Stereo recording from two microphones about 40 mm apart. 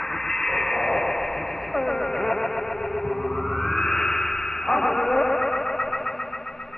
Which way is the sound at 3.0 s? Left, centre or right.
Centre.